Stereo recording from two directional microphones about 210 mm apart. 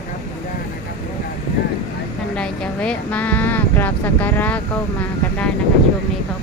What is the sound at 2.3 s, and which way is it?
Speech, 5° left (ahead or behind).